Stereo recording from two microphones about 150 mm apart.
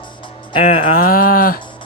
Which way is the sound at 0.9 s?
70° left (ahead or behind).